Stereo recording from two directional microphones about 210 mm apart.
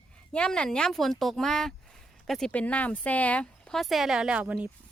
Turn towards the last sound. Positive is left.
turn(degrees=-5)  # may be behind; listen again after turning